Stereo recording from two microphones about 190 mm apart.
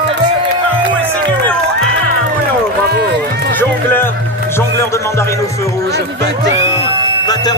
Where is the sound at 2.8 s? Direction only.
60° right (ahead or behind).